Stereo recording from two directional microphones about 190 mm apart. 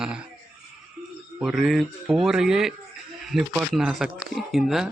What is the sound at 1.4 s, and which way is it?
Speech, centre (ahead or behind).